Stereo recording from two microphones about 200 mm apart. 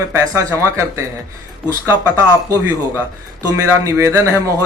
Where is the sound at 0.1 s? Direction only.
10° right (ahead or behind).